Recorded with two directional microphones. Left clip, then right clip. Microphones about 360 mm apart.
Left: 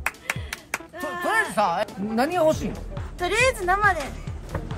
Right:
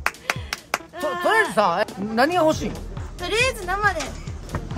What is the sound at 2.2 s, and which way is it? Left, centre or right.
Speech, centre.